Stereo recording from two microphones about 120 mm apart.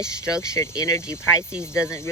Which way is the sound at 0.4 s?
25° left (ahead or behind).